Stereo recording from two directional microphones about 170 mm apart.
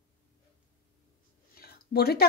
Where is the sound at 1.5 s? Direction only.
65° left (ahead or behind).